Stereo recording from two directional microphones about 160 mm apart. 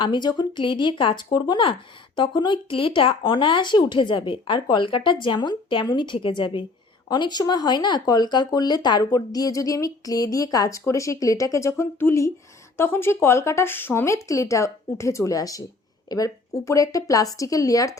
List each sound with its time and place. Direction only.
0.0 s speech: 30° left (ahead or behind)